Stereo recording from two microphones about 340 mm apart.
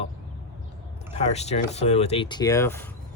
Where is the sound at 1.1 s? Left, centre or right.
Centre.